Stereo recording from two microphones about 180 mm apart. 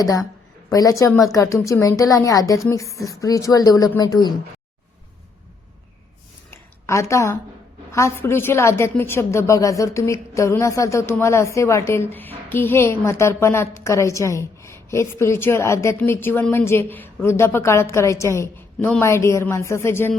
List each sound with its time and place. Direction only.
0.7 s a woman's voice: 20° left (ahead or behind)
6.5 s a sound: 15° left (ahead or behind)
7.9 s a woman's voice: 15° left (ahead or behind)